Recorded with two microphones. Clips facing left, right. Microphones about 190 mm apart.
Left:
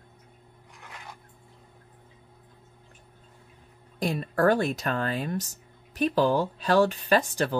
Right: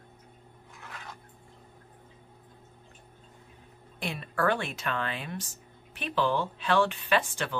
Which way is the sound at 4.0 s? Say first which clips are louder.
Left 6 dB; 40° left (ahead or behind).